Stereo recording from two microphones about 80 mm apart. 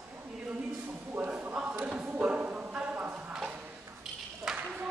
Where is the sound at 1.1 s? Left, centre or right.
Centre.